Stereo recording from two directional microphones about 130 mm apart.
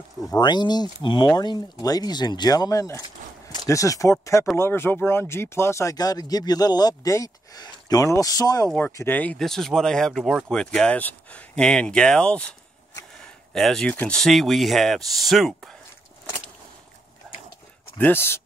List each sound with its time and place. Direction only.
0.3 s speech: 35° left (ahead or behind)
8.7 s speech: 15° left (ahead or behind); by 15.7 s centre (ahead or behind)
17.9 s speech: 15° left (ahead or behind)